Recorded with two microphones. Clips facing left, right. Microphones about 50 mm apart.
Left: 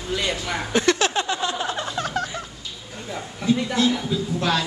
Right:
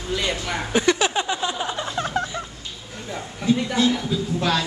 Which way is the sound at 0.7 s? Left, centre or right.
Centre.